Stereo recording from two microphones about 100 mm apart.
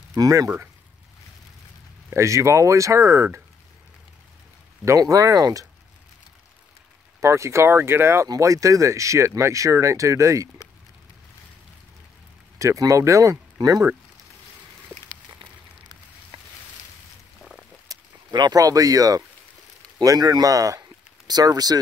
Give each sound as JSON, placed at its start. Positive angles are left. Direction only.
{"t": 0.1, "sound": "speech", "side_deg": -35}
{"t": 2.0, "sound": "speech", "side_deg": -30}
{"t": 4.8, "sound": "speech", "side_deg": -35}
{"t": 7.2, "sound": "speech", "side_deg": -30}
{"t": 12.5, "sound": "speech", "side_deg": -35}
{"t": 17.4, "sound": "a sound", "side_deg": 0}
{"t": 17.8, "sound": "speech", "side_deg": -40}